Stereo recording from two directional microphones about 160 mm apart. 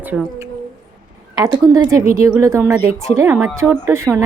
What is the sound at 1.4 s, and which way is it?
A woman's voice, 20° right (ahead or behind).